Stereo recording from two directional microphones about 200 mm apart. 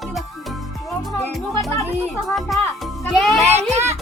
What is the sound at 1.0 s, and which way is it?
Music, centre (ahead or behind).